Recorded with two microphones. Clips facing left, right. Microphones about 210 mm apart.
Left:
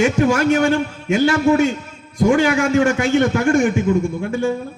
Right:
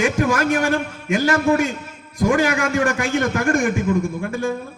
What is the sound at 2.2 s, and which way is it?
A man's voice, 25° left (ahead or behind).